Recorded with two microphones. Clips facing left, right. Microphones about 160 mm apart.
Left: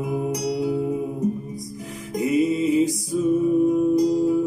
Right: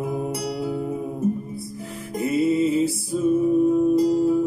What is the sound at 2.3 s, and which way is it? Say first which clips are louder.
Music: even; 15° left (ahead or behind).